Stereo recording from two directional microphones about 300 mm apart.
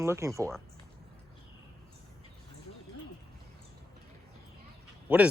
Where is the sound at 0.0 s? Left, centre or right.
Centre.